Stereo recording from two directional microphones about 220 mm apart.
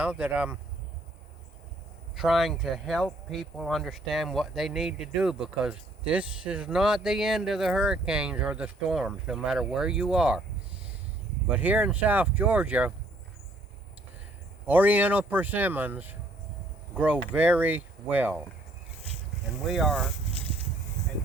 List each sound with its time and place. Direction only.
0.0 s speech: 5° right (ahead or behind)
2.1 s speech: centre (ahead or behind)
11.4 s speech: 5° right (ahead or behind)
14.7 s speech: 5° right (ahead or behind)
19.6 s speech: centre (ahead or behind)